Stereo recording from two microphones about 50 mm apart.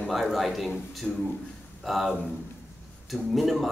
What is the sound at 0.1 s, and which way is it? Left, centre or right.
A man's voice, centre.